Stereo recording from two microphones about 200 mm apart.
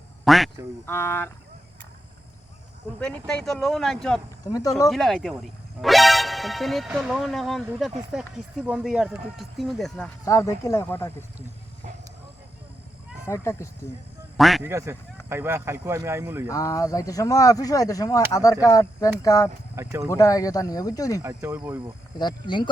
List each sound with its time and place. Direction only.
0.3 s speech: centre (ahead or behind)
0.9 s speech: 10° left (ahead or behind)
3.0 s speech: 5° left (ahead or behind)
10.2 s speech: 15° left (ahead or behind)
13.2 s speech: 15° left (ahead or behind)
14.3 s speech: centre (ahead or behind)
14.7 s speech: 15° right (ahead or behind)
16.5 s speech: 15° left (ahead or behind)
19.7 s speech: 15° right (ahead or behind)
20.1 s speech: 15° left (ahead or behind)
21.2 s speech: 15° right (ahead or behind)
22.2 s speech: 20° left (ahead or behind)